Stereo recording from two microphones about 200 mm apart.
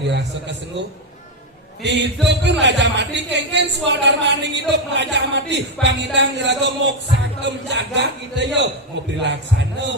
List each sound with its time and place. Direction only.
0.1 s speech: 60° right (ahead or behind)
1.8 s speech: 60° right (ahead or behind)